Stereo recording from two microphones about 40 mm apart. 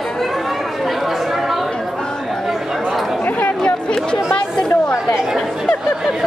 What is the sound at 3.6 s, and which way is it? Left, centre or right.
Chatter, left.